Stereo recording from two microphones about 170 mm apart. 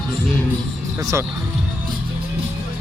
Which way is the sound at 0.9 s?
15° right (ahead or behind).